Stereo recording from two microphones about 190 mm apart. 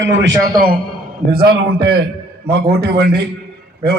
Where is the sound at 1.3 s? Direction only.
55° right (ahead or behind).